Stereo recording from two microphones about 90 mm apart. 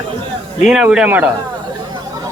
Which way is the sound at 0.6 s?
5° right (ahead or behind).